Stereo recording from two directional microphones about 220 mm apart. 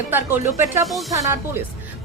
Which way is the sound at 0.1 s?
10° right (ahead or behind).